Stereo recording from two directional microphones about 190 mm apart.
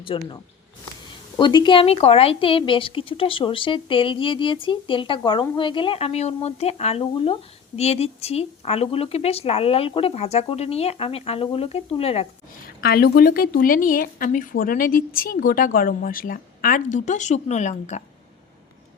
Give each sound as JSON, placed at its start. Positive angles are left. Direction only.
{"t": 0.1, "sound": "a woman's voice", "side_deg": 25}
{"t": 1.4, "sound": "a woman's voice", "side_deg": 25}
{"t": 12.6, "sound": "a woman's voice", "side_deg": 55}